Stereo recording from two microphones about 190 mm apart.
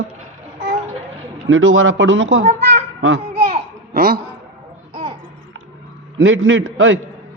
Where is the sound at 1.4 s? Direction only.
90° right.